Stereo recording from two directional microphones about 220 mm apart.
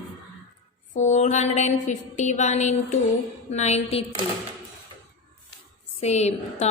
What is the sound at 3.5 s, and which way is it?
Speech, 30° left (ahead or behind).